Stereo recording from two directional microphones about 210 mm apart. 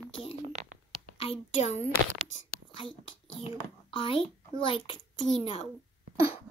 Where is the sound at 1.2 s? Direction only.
30° left (ahead or behind).